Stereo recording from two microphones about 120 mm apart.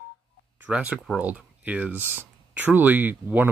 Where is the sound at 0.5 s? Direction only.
10° right (ahead or behind).